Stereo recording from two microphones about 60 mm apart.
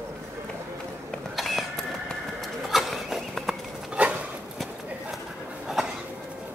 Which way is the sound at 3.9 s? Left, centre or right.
Centre.